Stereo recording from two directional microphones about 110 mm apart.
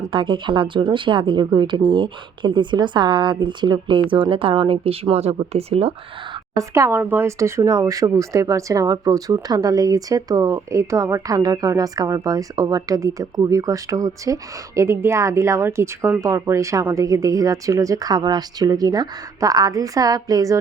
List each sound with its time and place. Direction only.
0.1 s speech: 50° right (ahead or behind); by 5.9 s 65° right (ahead or behind)
6.6 s a woman's voice: 25° right (ahead or behind)